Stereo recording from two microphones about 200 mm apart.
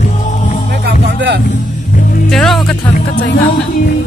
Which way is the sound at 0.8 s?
60° right (ahead or behind).